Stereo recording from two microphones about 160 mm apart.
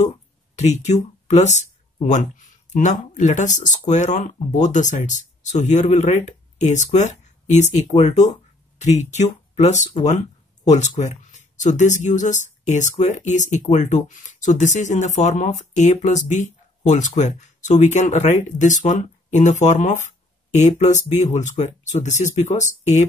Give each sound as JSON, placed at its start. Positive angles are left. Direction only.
{"t": 0.6, "sound": "speech", "side_deg": 45}